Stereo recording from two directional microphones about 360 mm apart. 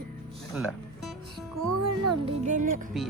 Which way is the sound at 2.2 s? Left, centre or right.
Right.